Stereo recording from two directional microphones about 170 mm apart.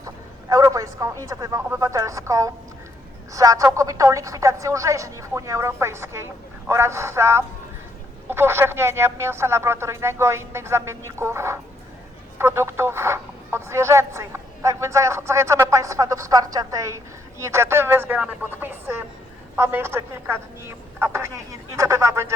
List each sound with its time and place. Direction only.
0.0 s a man's voice: 20° right (ahead or behind)